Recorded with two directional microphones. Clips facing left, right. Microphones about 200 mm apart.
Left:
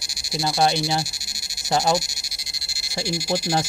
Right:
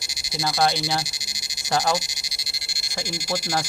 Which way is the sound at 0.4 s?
15° left (ahead or behind).